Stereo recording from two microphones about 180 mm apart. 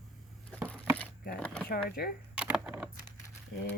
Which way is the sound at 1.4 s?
5° left (ahead or behind).